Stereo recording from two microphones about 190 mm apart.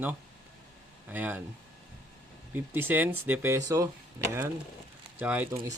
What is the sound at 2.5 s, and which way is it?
Speech, 10° right (ahead or behind).